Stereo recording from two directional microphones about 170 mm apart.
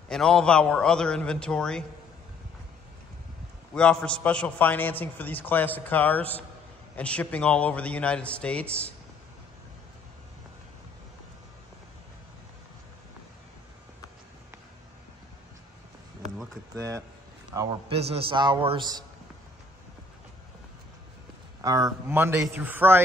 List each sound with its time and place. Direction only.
0.1 s a man's voice: 5° left (ahead or behind)
3.7 s a man's voice: 5° left (ahead or behind)
16.7 s a man's voice: 20° right (ahead or behind)
17.8 s a man's voice: 35° right (ahead or behind)
21.5 s a man's voice: 20° right (ahead or behind)